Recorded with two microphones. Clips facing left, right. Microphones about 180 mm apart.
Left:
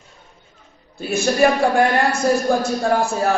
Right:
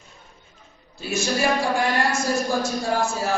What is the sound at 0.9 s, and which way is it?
A woman's voice, 55° left (ahead or behind).